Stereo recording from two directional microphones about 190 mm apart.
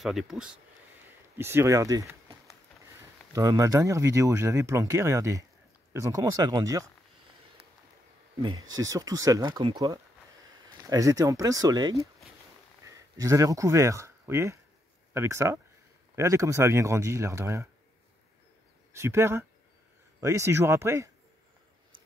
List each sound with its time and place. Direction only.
0.0 s speech: centre (ahead or behind)
1.4 s speech: 15° right (ahead or behind)
3.3 s speech: 15° right (ahead or behind)
8.7 s speech: 20° right (ahead or behind)
18.9 s speech: 15° right (ahead or behind)